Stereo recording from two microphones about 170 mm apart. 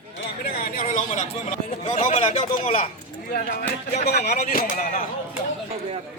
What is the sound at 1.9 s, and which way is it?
Speech, 40° left (ahead or behind).